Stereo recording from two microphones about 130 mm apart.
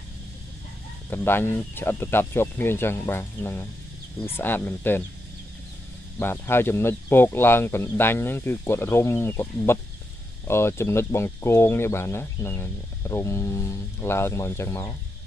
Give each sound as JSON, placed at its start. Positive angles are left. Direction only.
{"t": 1.1, "sound": "speech", "side_deg": 15}
{"t": 6.1, "sound": "speech", "side_deg": 20}